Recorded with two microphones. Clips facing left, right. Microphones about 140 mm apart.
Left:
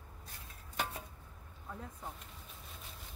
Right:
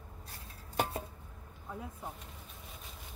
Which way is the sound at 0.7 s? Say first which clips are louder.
Right 6 dB; 35° right (ahead or behind).